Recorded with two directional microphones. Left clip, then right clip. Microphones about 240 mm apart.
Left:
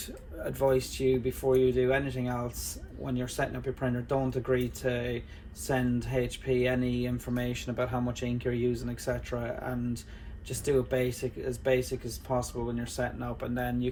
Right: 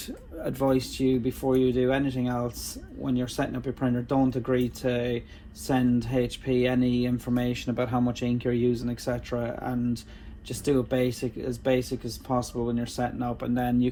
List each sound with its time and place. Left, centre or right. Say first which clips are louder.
0.4 s speech: right 1 dB; centre